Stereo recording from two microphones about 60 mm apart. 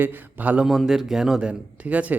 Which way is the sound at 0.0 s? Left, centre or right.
Right.